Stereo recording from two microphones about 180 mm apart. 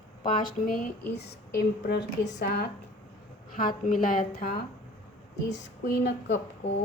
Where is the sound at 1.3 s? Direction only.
65° left (ahead or behind).